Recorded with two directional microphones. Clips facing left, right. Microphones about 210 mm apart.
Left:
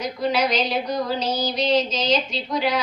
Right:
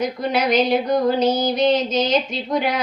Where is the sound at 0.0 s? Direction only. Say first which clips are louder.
Right 2 dB; 50° right (ahead or behind).